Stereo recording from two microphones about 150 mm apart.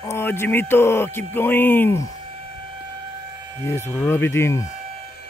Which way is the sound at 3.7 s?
15° left (ahead or behind).